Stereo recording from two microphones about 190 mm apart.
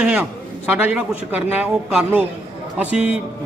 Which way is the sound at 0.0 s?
5° right (ahead or behind).